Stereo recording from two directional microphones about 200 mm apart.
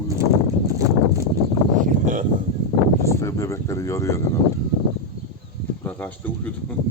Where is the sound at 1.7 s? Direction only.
40° right (ahead or behind).